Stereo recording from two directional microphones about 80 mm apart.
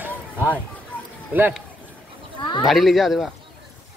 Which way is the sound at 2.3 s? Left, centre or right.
Left.